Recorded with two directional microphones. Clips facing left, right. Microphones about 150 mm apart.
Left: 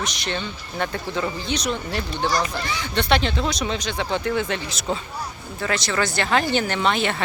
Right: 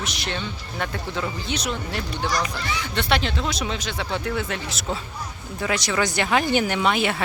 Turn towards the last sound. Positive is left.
turn(degrees=-10)  # may be behind; listen again after turning